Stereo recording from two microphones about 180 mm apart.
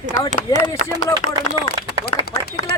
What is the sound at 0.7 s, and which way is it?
Speech, 20° left (ahead or behind).